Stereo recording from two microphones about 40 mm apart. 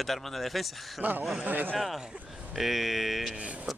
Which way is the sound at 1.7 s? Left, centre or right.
Centre.